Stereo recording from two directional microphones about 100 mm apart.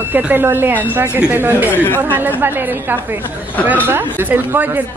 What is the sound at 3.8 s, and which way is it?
Speech, 20° right (ahead or behind).